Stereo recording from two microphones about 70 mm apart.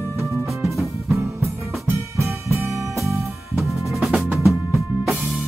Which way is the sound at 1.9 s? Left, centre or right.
Right.